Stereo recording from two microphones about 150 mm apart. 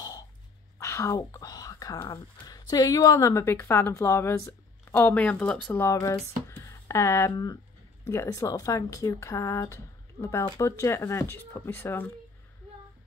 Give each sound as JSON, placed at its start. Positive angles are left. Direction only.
{"t": 0.7, "sound": "whispering", "side_deg": 20}
{"t": 2.4, "sound": "a woman's voice", "side_deg": 25}